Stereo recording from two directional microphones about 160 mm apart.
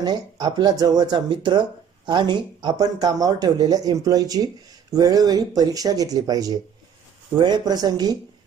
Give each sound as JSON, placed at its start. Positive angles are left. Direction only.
{"t": 0.0, "sound": "speech", "side_deg": -25}